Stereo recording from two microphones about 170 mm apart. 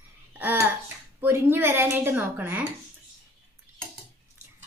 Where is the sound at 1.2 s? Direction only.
15° right (ahead or behind).